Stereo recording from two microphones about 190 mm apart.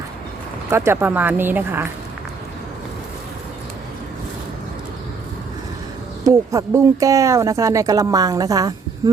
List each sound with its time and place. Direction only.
0.7 s speech: 15° right (ahead or behind)
6.2 s speech: 15° right (ahead or behind)